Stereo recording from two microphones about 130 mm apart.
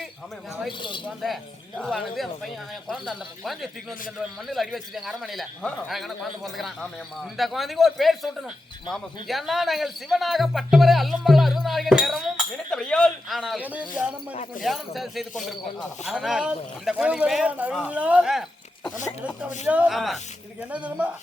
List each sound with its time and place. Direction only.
0.8 s speech: 40° left (ahead or behind)
1.2 s a man's voice: centre (ahead or behind)
13.4 s a man's voice: 10° right (ahead or behind)
19.6 s speech: 10° right (ahead or behind)